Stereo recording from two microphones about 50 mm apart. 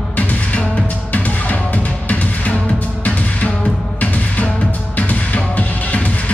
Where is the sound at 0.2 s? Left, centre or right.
Left.